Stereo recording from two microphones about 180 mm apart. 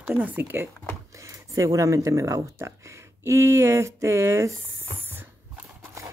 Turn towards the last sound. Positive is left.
turn(degrees=-15)  # may be behind; listen again after turning